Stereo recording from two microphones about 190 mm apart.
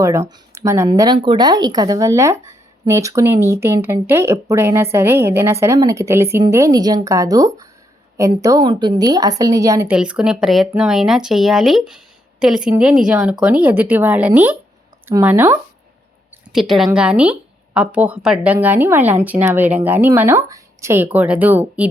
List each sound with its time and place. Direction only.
0.0 s a woman's voice: 15° right (ahead or behind)